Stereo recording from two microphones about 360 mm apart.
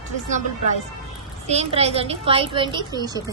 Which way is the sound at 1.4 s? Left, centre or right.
Centre.